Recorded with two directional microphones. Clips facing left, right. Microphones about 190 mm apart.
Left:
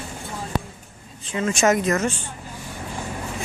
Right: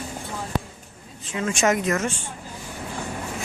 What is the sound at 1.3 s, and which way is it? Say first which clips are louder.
Speech: left 2 dB; 35° left (ahead or behind).